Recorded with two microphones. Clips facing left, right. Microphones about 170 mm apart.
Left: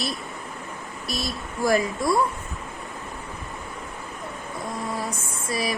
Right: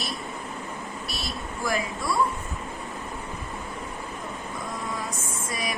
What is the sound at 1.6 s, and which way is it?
Speech, 40° left (ahead or behind).